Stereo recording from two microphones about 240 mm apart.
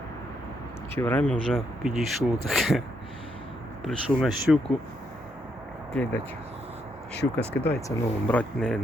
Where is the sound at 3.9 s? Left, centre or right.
Centre.